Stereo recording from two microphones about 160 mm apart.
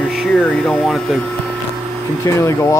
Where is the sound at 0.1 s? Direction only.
5° left (ahead or behind).